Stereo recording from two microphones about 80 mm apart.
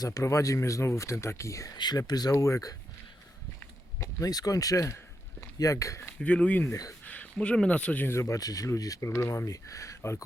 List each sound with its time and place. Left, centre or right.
0.0 s speech: left
1.7 s speech: left
4.0 s speech: left
6.1 s speech: centre
6.7 s speech: left
7.0 s speech: centre
8.0 s speech: left
8.4 s speech: left